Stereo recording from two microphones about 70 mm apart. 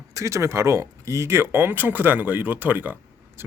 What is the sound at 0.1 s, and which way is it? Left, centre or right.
Speech, right.